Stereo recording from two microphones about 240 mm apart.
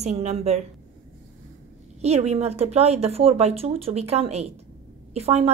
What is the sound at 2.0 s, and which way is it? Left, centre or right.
Speech, right.